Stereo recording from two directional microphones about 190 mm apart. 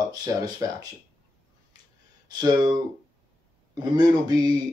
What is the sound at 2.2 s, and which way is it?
Speech, 20° right (ahead or behind).